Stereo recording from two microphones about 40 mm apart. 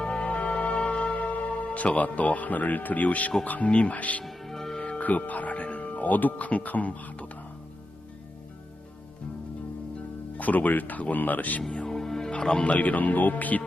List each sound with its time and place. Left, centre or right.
0.0 s music: left
0.3 s music: left
3.4 s speech: left
4.2 s music: centre
4.8 s music: left
5.0 s speech: left
10.3 s speech: left
11.9 s music: centre
12.3 s speech: left
12.8 s speech: left